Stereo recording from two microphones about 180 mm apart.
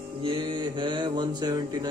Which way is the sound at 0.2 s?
25° right (ahead or behind).